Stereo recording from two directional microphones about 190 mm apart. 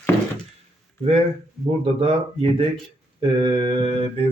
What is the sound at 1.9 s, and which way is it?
Speech, 30° right (ahead or behind).